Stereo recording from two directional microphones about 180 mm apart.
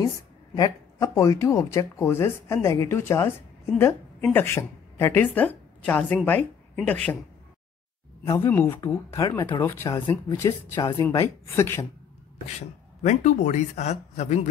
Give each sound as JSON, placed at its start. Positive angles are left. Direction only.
{"t": 0.6, "sound": "speech", "side_deg": 20}
{"t": 8.3, "sound": "speech", "side_deg": 10}
{"t": 13.0, "sound": "speech", "side_deg": 40}